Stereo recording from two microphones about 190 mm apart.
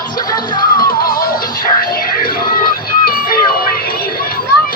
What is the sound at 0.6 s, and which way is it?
Music, 50° left (ahead or behind).